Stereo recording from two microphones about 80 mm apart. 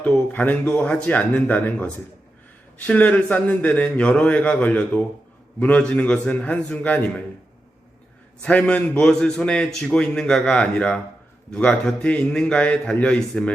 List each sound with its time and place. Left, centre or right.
0.3 s a man's voice: centre
8.4 s a man's voice: centre